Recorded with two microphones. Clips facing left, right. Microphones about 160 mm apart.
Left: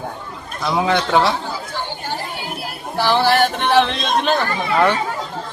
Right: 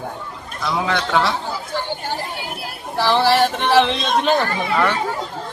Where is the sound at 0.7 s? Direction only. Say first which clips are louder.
Left 3 dB; 20° left (ahead or behind).